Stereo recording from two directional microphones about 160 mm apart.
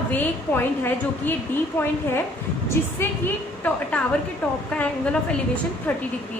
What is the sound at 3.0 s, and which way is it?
Speech, 15° left (ahead or behind).